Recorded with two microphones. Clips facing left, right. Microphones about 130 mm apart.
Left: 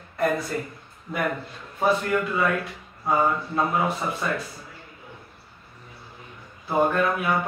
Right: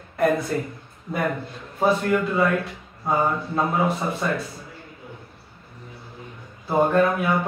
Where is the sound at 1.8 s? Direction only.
25° right (ahead or behind).